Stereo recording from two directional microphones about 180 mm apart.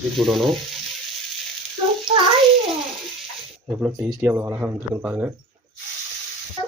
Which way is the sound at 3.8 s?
10° right (ahead or behind).